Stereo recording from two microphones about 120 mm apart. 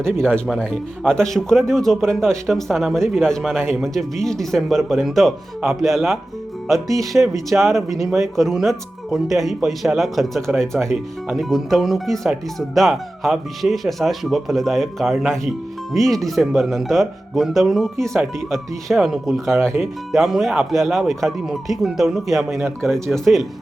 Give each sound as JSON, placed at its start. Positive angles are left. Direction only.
{"t": 0.2, "sound": "speech", "side_deg": 5}
{"t": 7.1, "sound": "speech", "side_deg": -15}
{"t": 7.5, "sound": "speech", "side_deg": 0}
{"t": 19.5, "sound": "speech", "side_deg": -20}
{"t": 19.8, "sound": "speech", "side_deg": 0}